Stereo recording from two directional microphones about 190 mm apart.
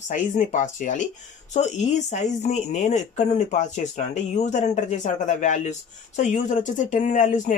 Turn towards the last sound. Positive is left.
turn(degrees=40)  # may be behind; listen again after turning